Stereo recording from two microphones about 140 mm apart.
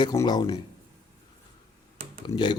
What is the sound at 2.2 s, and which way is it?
Speech, 30° left (ahead or behind).